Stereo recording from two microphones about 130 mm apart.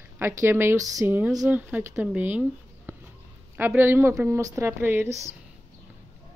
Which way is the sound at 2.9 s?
20° right (ahead or behind).